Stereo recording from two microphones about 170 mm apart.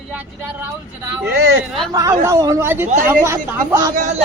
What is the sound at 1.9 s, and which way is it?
A woman's voice, 20° right (ahead or behind).